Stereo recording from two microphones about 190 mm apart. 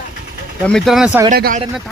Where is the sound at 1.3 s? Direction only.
50° right (ahead or behind).